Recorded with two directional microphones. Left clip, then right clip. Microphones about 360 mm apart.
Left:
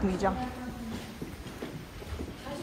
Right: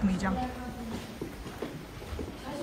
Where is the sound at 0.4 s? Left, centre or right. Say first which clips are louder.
Right 2 dB; centre.